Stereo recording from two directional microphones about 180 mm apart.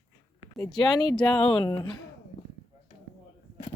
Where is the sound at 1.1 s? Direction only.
5° left (ahead or behind).